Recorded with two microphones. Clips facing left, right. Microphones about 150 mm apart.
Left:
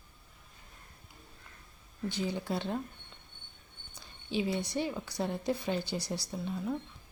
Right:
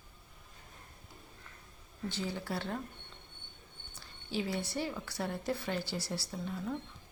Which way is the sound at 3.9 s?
20° left (ahead or behind).